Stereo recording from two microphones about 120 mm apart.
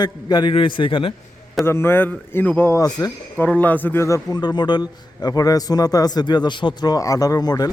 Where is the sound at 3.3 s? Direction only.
15° left (ahead or behind).